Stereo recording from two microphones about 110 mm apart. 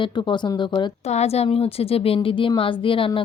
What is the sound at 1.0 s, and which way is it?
Speech, 75° left (ahead or behind).